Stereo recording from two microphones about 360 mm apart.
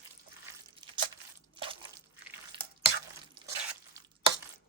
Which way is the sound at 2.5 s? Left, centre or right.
Centre.